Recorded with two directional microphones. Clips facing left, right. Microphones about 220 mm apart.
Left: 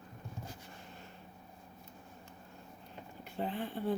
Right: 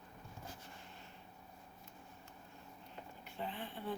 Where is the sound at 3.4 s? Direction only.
40° left (ahead or behind).